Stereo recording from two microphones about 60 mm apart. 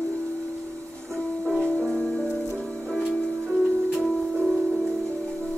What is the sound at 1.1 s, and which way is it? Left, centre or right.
Music, centre.